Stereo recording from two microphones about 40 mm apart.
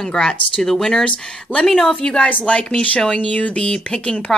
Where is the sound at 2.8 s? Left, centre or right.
Left.